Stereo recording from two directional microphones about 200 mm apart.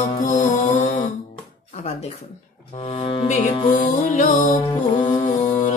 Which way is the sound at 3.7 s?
40° left (ahead or behind).